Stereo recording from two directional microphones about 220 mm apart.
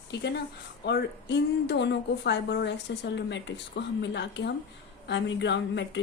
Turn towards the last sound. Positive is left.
turn(degrees=55)  # may be behind; listen again after turning